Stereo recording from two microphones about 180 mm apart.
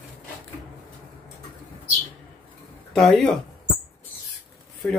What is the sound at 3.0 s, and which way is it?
Speech, centre (ahead or behind).